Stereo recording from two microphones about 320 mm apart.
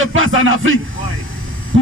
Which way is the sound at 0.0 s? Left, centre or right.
Right.